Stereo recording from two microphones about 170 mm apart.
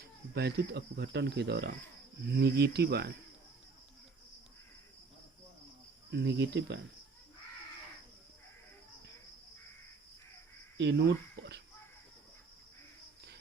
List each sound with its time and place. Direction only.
0.0 s speech: 75° right (ahead or behind)
6.1 s speech: 85° right
10.8 s speech: 85° right